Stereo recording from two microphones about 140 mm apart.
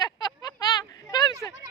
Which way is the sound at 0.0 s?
30° left (ahead or behind).